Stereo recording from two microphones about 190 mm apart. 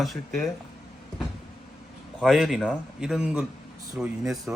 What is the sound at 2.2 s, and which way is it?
Speech, centre (ahead or behind).